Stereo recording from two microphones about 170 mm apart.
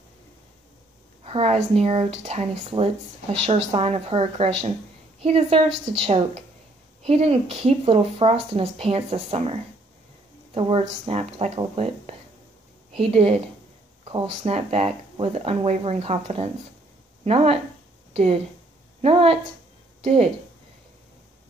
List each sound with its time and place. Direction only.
1.2 s speech: 35° right (ahead or behind)
18.9 s a woman's voice: 35° right (ahead or behind)